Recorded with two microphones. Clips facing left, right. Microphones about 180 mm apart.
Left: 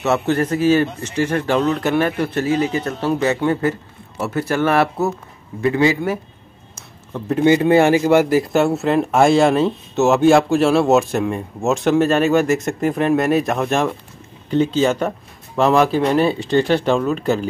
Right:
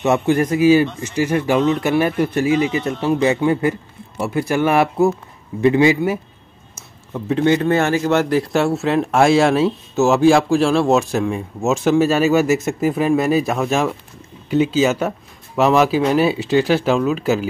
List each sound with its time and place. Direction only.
0.0 s a man's voice: 15° right (ahead or behind)
7.3 s speech: 10° left (ahead or behind)